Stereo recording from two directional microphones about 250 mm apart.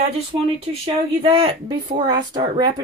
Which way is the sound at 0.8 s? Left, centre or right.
Right.